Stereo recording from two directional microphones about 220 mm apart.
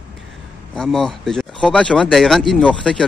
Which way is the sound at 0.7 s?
Centre (ahead or behind).